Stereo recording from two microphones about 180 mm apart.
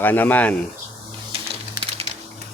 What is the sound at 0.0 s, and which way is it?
Speech, 10° left (ahead or behind).